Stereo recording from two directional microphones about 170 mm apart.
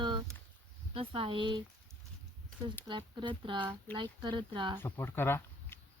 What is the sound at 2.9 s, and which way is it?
Speech, 30° right (ahead or behind).